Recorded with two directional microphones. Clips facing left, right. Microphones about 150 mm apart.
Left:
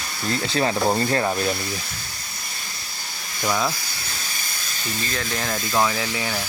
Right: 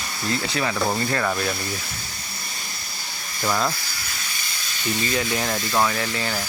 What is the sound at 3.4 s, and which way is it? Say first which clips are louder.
Speech: even; centre (ahead or behind).